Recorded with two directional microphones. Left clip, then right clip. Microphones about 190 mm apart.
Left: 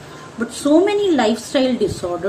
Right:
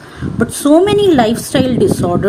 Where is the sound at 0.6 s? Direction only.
45° right (ahead or behind).